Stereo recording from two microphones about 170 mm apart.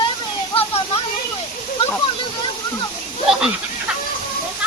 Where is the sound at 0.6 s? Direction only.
35° left (ahead or behind).